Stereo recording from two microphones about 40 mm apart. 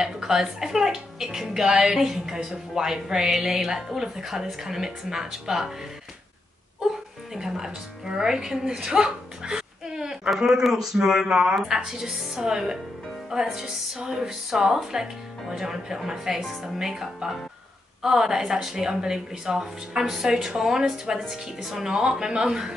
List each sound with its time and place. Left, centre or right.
0.0 s a woman's voice: centre
7.3 s a woman's voice: centre